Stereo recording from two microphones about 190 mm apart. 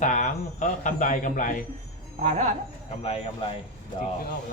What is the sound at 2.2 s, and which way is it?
Speech, 35° right (ahead or behind).